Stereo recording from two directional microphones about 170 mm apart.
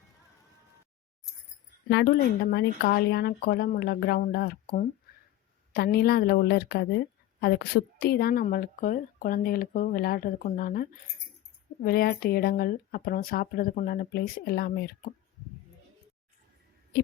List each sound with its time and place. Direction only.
1.9 s a woman's voice: 85° left; by 14.9 s 65° left (ahead or behind)